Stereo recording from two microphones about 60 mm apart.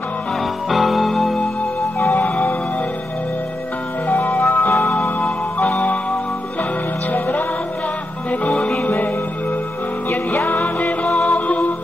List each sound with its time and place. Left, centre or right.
0.7 s music: centre
2.0 s music: left
4.1 s music: left
7.1 s music: left